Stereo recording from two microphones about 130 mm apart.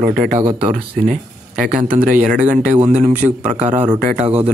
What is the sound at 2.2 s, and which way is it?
A man's voice, 75° right (ahead or behind).